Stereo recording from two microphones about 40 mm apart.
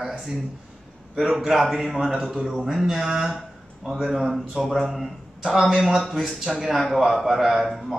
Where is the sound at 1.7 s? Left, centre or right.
Centre.